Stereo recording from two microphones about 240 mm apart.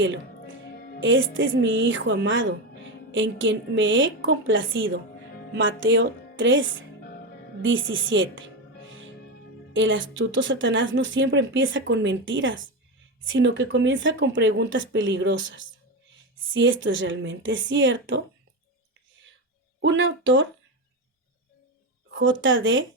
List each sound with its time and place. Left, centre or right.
0.0 s music: right
1.0 s speech: right
9.7 s speech: right
19.8 s speech: right
22.4 s speech: right